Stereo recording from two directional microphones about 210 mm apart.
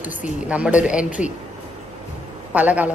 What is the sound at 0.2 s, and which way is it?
A woman's voice, 5° right (ahead or behind).